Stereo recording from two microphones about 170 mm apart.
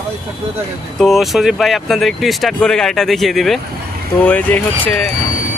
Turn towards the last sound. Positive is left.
turn(degrees=10)  # may be behind; listen again after turning